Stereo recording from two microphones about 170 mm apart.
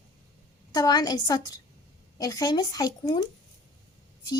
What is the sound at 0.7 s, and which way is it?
Speech, 25° left (ahead or behind).